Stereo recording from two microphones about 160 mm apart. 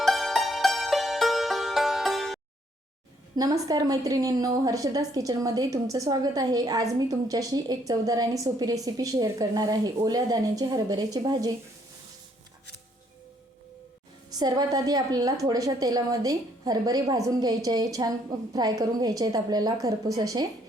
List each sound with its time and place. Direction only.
0.0 s music: centre (ahead or behind)
3.3 s a woman's voice: 25° right (ahead or behind)
14.3 s a woman's voice: 25° right (ahead or behind)